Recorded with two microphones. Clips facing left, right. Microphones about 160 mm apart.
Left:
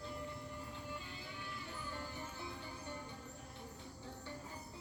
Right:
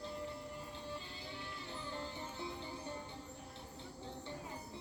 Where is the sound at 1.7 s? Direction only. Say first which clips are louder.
Right 4 dB; 25° right (ahead or behind).